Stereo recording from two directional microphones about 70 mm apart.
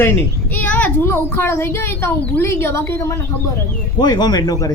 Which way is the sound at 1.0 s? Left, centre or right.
Left.